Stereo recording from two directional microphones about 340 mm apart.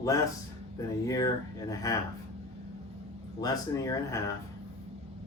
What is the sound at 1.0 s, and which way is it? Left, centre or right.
Speech, centre.